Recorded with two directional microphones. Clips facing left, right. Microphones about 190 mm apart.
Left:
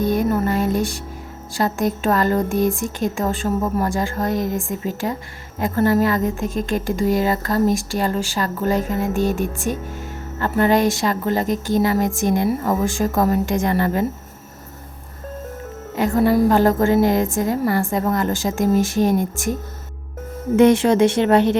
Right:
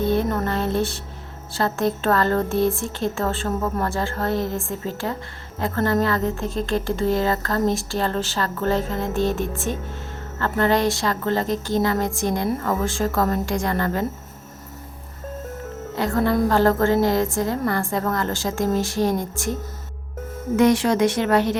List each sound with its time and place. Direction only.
0.0 s a sound: 15° left (ahead or behind)
1.5 s a woman's voice: 15° left (ahead or behind)
16.0 s a woman's voice: 15° left (ahead or behind)
20.6 s speech: 25° left (ahead or behind)